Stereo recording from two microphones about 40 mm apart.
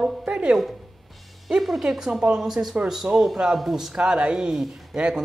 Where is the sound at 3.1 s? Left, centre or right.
Right.